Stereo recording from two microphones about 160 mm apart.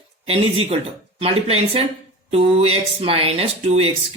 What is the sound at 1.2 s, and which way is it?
Speech, 35° right (ahead or behind).